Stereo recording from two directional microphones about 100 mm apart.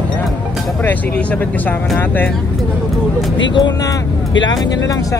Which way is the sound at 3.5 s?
45° left (ahead or behind).